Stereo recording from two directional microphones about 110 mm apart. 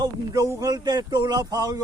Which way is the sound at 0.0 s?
35° right (ahead or behind).